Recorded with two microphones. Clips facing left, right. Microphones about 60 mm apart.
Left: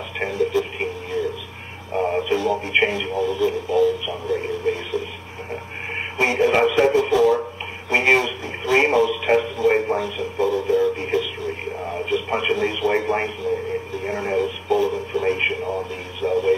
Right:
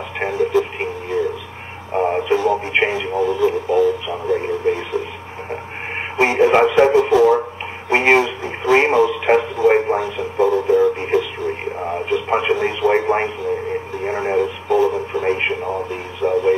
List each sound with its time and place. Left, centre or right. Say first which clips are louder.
0.2 s radio: right 4 dB; right
6.1 s radio: right 5 dB; right